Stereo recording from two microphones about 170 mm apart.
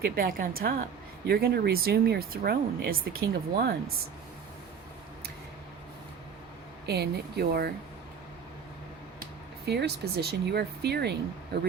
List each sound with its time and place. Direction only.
0.0 s speech: 55° right (ahead or behind)
6.8 s speech: 75° right (ahead or behind)
9.6 s speech: 75° right (ahead or behind)